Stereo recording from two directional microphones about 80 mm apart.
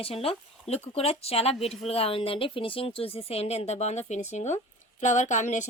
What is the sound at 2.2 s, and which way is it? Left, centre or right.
Speech, left.